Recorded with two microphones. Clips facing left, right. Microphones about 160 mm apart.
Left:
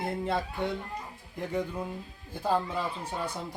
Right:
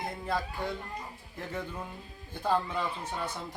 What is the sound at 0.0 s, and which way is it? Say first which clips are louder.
Speech: left 3 dB; 25° left (ahead or behind).